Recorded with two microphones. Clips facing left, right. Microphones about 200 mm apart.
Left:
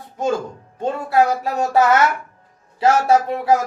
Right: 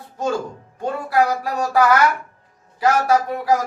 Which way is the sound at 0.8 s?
25° left (ahead or behind).